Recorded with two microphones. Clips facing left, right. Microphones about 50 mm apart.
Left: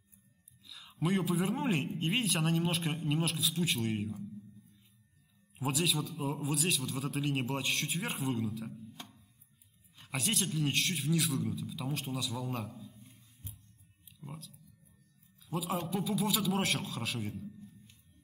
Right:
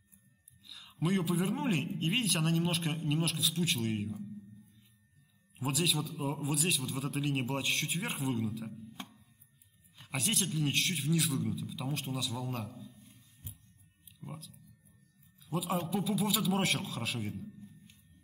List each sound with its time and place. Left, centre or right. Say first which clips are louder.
0.7 s a man's voice: even; centre
5.6 s a man's voice: even; centre
9.9 s a man's voice: even; centre
14.2 s a man's voice: right 1 dB; centre